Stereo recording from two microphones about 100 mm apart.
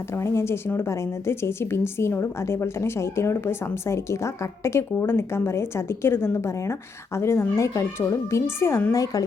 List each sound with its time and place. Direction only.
0.2 s a woman's voice: 30° left (ahead or behind)